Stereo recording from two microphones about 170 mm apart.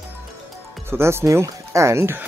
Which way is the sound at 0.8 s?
15° right (ahead or behind).